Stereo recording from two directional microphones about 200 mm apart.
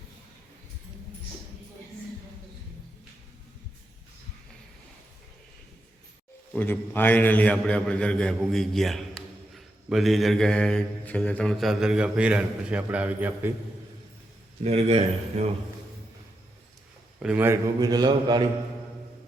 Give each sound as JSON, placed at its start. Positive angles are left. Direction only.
{"t": 6.5, "sound": "speech", "side_deg": 10}
{"t": 14.6, "sound": "speech", "side_deg": -30}
{"t": 17.2, "sound": "a man's voice", "side_deg": -10}